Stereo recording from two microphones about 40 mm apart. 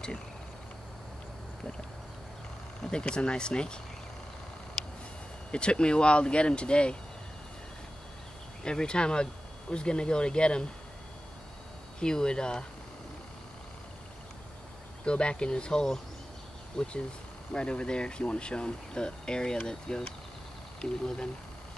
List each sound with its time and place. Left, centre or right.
2.8 s speech: left
5.5 s speech: left
8.6 s speech: left
12.0 s speech: centre
15.0 s speech: left